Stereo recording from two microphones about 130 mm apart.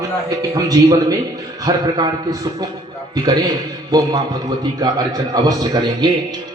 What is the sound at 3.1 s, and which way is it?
A man's voice, 30° right (ahead or behind).